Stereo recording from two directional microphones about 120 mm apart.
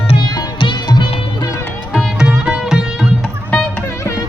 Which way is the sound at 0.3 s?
40° left (ahead or behind).